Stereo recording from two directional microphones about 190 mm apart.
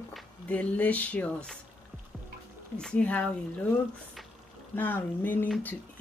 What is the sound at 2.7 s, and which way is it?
Speech, 5° left (ahead or behind).